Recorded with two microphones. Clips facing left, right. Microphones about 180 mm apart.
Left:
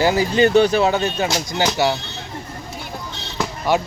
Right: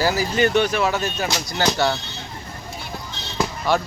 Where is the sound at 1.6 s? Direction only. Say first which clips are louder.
Left 1 dB; 10° left (ahead or behind).